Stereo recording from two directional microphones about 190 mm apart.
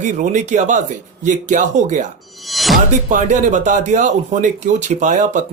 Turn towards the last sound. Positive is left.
turn(degrees=-40)  # may be behind; listen again after turning